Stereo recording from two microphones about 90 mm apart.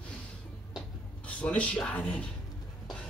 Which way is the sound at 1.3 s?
15° left (ahead or behind).